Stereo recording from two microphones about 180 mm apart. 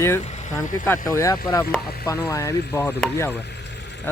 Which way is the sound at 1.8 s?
60° left (ahead or behind).